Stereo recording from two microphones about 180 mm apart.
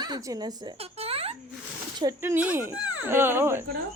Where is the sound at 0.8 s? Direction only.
35° right (ahead or behind).